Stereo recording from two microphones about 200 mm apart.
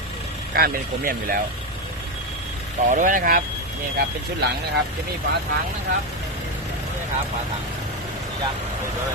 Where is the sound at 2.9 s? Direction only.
40° right (ahead or behind).